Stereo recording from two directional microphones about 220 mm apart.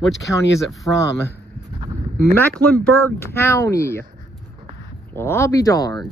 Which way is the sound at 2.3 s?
5° left (ahead or behind).